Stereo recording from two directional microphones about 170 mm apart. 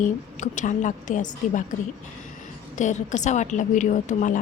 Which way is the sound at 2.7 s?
45° left (ahead or behind).